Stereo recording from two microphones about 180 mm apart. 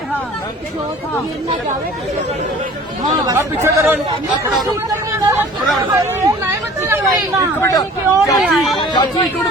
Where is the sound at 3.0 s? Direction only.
20° right (ahead or behind).